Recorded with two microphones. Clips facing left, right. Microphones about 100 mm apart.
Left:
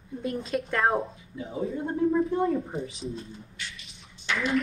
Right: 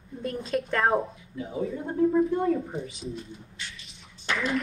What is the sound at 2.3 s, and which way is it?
Speech, 30° left (ahead or behind).